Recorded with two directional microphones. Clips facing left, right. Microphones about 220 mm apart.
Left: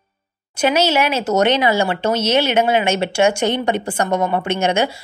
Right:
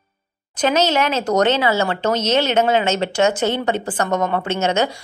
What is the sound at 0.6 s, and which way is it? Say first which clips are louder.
Speech: left 1 dB; 10° left (ahead or behind).